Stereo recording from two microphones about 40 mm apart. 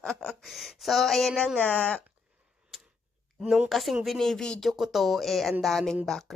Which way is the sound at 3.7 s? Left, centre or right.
Centre.